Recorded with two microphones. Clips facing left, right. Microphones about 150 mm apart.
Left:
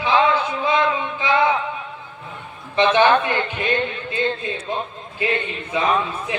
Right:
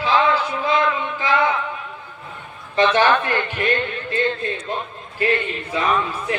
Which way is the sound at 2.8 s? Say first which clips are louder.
Left 1 dB; 20° left (ahead or behind).